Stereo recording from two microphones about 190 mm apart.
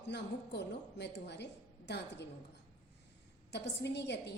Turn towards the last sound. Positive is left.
turn(degrees=65)  # may be behind; listen again after turning